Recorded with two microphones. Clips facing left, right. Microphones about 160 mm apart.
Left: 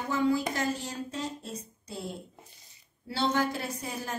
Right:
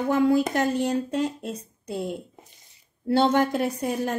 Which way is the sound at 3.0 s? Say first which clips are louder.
Right 8 dB; 55° right (ahead or behind).